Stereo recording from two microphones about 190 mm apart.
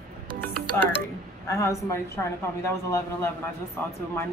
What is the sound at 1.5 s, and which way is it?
Speech, 15° left (ahead or behind).